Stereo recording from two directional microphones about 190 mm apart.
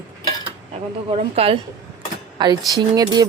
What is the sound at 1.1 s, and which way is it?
A woman's voice, 30° right (ahead or behind).